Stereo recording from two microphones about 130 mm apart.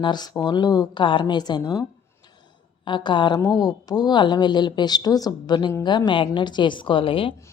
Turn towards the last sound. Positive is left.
turn(degrees=45)  # may be behind; listen again after turning